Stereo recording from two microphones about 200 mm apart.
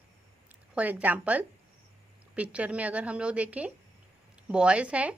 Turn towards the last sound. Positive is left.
turn(degrees=-5)  # may be behind; listen again after turning